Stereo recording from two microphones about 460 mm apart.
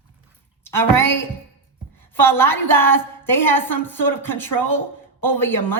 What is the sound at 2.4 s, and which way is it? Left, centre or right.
Speech, centre.